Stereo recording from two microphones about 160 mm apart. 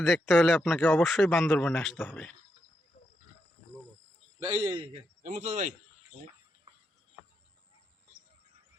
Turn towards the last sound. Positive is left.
turn(degrees=-35)  # may be behind; listen again after turning